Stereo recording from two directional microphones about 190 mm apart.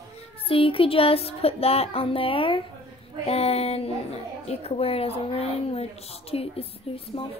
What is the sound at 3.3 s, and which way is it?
A child's voice, 30° left (ahead or behind).